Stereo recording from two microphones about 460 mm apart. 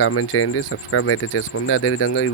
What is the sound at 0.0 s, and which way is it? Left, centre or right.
Speech, left.